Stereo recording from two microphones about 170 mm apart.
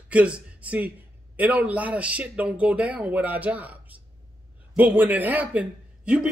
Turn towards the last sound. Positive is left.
turn(degrees=-5)  # may be behind; listen again after turning